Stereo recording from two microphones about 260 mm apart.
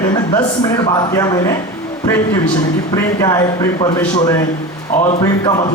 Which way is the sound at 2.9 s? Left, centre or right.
Centre.